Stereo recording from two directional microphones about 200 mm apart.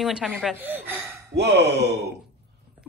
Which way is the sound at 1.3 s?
55° right (ahead or behind).